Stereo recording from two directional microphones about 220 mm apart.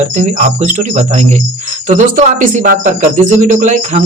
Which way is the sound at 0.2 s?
35° right (ahead or behind).